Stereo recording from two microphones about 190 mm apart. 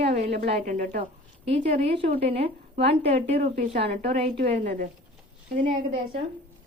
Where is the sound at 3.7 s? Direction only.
60° right (ahead or behind).